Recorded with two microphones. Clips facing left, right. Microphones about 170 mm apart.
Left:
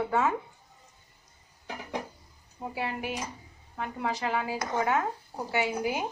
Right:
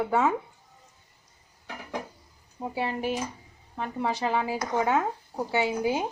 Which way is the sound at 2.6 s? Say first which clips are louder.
Right 4 dB; 25° right (ahead or behind).